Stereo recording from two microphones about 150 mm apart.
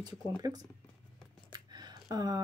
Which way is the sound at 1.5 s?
25° right (ahead or behind).